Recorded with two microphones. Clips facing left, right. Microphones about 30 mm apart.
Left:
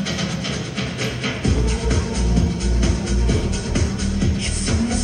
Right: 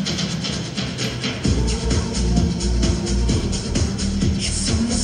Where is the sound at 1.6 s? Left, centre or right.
Right.